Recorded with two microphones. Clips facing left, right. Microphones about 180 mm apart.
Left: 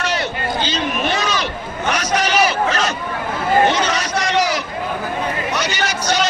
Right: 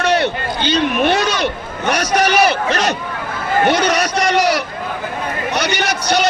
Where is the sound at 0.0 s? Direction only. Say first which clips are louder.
Right 6 dB; 60° right (ahead or behind).